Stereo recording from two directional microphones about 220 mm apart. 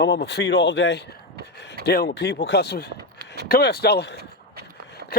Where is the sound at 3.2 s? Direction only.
50° right (ahead or behind).